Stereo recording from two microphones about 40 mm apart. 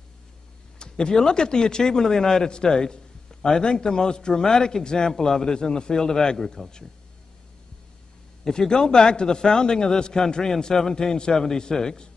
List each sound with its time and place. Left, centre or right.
0.7 s speech: left
8.5 s speech: centre